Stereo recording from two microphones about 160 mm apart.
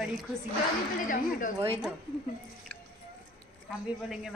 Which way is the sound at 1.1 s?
55° left (ahead or behind).